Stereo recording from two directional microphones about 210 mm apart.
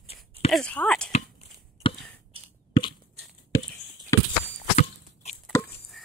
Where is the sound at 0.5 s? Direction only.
5° left (ahead or behind).